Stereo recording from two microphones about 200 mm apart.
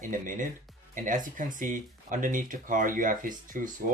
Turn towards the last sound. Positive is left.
turn(degrees=-40)  # may be behind; listen again after turning